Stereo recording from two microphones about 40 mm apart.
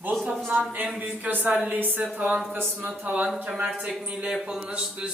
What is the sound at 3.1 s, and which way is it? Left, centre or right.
Speech, right.